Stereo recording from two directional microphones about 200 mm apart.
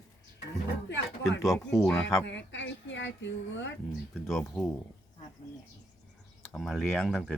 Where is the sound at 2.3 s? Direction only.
65° left (ahead or behind).